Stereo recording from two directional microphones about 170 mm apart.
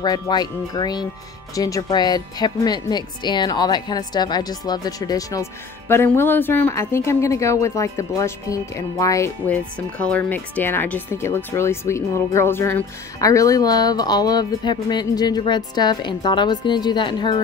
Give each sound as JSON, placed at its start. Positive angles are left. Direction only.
{"t": 0.0, "sound": "a woman's voice", "side_deg": 25}